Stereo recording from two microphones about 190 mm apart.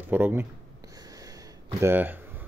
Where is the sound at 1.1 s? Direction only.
20° right (ahead or behind).